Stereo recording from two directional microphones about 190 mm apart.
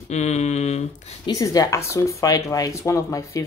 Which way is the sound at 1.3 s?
15° left (ahead or behind).